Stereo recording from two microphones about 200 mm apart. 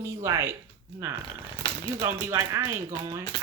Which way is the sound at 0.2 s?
15° right (ahead or behind).